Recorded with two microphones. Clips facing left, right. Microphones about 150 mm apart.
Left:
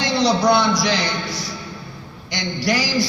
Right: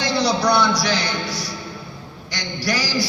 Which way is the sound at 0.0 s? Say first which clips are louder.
Left 2 dB; 20° left (ahead or behind).